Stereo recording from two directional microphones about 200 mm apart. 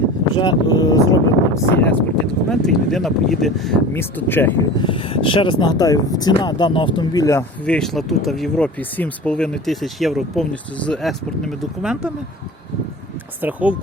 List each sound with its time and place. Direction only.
0.3 s speech: 20° left (ahead or behind)
4.8 s speech: 25° left (ahead or behind); by 12.1 s 5° right (ahead or behind)
13.4 s speech: 5° right (ahead or behind)